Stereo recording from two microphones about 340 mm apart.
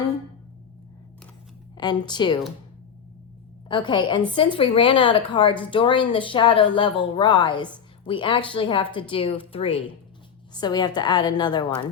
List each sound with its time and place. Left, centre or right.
1.8 s speech: centre
3.7 s speech: centre